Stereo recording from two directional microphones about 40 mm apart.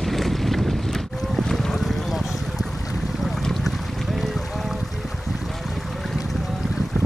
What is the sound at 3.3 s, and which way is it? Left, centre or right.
Boat, centre.